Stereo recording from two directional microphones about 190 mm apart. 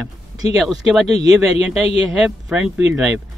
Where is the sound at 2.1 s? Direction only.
5° right (ahead or behind).